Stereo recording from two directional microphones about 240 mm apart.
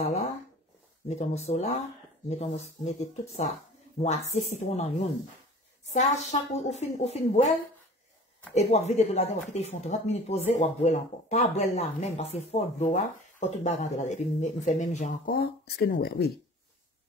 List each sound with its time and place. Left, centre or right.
0.0 s speech: left
6.3 s speech: left
8.5 s speech: left